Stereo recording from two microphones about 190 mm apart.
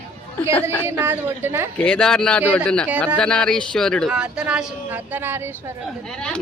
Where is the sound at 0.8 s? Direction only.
10° right (ahead or behind).